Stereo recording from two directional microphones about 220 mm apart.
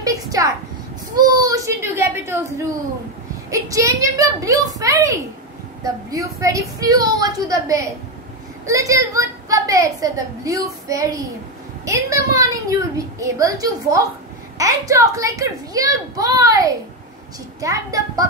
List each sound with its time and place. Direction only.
0.0 s a woman's voice: 15° right (ahead or behind)
3.4 s a woman's voice: 15° right (ahead or behind)